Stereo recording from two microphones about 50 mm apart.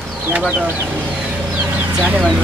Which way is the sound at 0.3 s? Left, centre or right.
Centre.